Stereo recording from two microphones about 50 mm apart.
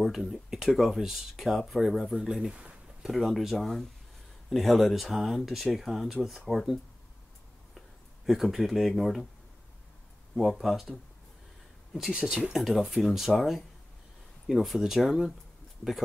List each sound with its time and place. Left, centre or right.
0.0 s speech: centre
2.5 s a sound: right
3.0 s speech: centre
8.3 s speech: centre
10.6 s speech: centre
12.1 s speech: centre